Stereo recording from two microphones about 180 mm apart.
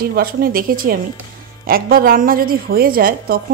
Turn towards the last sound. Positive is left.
turn(degrees=-55)  # may be behind; listen again after turning